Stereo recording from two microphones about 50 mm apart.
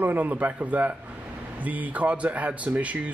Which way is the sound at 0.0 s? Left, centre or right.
Right.